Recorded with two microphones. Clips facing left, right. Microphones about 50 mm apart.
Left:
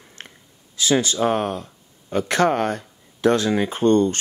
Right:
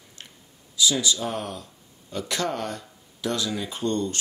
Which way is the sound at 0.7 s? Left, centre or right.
Left.